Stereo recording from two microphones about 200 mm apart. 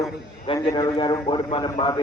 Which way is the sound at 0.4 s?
25° left (ahead or behind).